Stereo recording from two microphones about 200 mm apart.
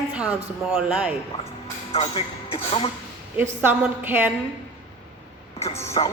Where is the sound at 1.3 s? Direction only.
30° left (ahead or behind).